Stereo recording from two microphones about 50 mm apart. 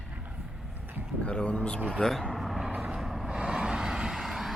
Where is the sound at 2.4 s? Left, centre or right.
Centre.